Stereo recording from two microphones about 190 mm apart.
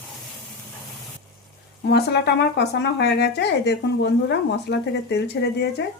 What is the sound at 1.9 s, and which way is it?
Speech, 60° left (ahead or behind).